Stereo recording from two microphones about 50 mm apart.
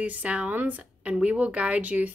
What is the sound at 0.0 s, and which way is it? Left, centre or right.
Speech, right.